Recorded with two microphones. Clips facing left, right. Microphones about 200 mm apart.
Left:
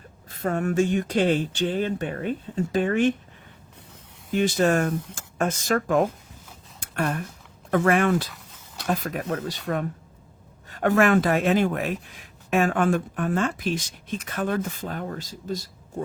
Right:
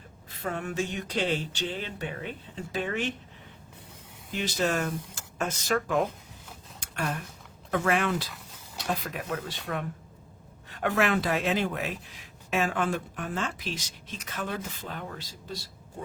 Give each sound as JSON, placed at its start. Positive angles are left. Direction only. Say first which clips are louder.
{"t": 0.3, "sound": "speech", "louder": "left 8 dB", "side_deg": 45}
{"t": 4.3, "sound": "speech", "louder": "left 8 dB", "side_deg": 50}
{"t": 6.7, "sound": "a sound", "louder": "left 6 dB", "side_deg": 50}
{"t": 7.7, "sound": "speech", "louder": "left 6 dB", "side_deg": 50}
{"t": 8.3, "sound": "a sound", "louder": "even", "side_deg": 0}
{"t": 8.9, "sound": "speech", "louder": "left 5 dB", "side_deg": 45}
{"t": 10.7, "sound": "speech", "louder": "left 7 dB", "side_deg": 45}